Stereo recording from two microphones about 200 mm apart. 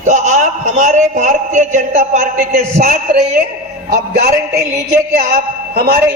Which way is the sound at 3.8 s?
50° right (ahead or behind).